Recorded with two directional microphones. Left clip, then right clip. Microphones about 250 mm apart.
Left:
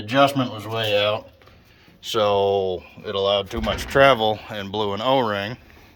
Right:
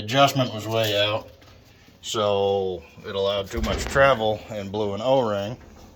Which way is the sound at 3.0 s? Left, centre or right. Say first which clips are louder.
Left 3 dB; left.